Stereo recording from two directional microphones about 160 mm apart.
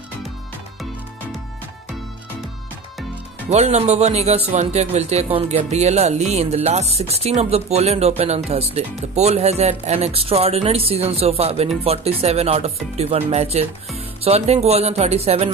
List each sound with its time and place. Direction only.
3.4 s speech: 45° right (ahead or behind)